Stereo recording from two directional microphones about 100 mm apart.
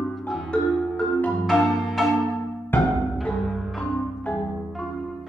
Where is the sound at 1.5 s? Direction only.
Centre (ahead or behind).